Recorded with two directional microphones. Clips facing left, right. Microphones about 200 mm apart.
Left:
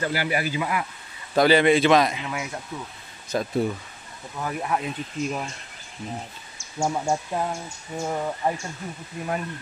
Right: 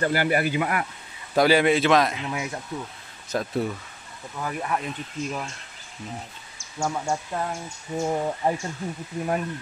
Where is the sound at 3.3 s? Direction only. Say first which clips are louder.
Left 2 dB; centre (ahead or behind).